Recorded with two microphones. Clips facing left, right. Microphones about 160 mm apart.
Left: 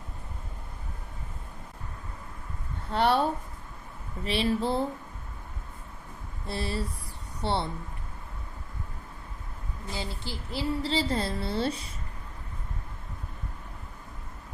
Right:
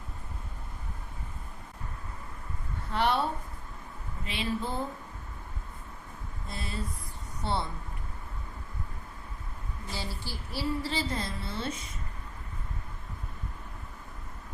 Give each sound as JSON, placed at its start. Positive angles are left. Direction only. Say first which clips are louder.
{"t": 2.9, "sound": "a woman's voice", "louder": "left 3 dB", "side_deg": 35}
{"t": 4.3, "sound": "a woman's voice", "louder": "left 6 dB", "side_deg": 35}
{"t": 6.6, "sound": "a woman's voice", "louder": "left 5 dB", "side_deg": 30}
{"t": 9.9, "sound": "a woman's voice", "louder": "left 3 dB", "side_deg": 20}